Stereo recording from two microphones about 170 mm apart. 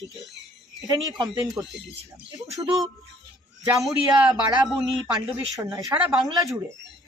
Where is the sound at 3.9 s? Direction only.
25° right (ahead or behind).